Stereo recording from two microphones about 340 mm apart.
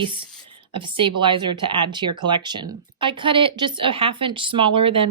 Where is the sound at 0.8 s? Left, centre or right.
Centre.